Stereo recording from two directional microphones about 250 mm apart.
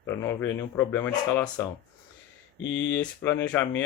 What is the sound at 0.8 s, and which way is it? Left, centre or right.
Speech, centre.